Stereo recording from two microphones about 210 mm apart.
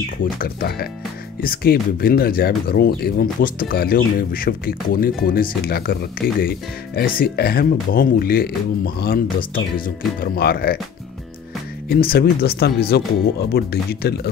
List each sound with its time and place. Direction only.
0.2 s speech: 45° left (ahead or behind)
11.9 s speech: 45° left (ahead or behind)